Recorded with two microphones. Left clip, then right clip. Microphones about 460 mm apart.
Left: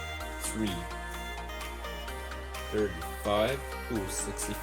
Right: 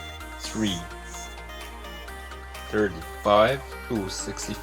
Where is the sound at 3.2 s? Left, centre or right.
Left.